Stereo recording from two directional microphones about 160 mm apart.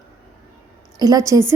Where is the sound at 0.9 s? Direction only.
20° right (ahead or behind).